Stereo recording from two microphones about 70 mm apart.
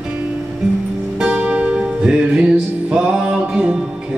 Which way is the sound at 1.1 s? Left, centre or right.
Centre.